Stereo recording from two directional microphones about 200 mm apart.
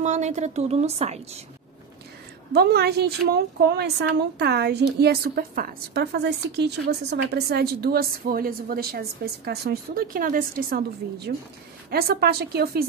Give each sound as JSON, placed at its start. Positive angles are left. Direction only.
{"t": 0.0, "sound": "a woman's voice", "side_deg": -35}
{"t": 2.5, "sound": "a woman's voice", "side_deg": -55}